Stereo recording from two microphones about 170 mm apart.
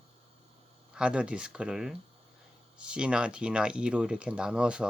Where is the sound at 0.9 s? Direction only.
5° right (ahead or behind).